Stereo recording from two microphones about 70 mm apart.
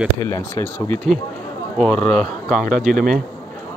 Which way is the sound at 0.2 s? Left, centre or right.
Left.